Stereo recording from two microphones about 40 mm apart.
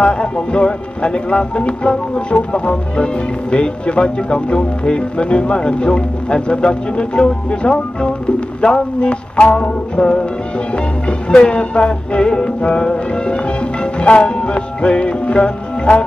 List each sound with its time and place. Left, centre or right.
0.0 s speech: left
13.9 s music: left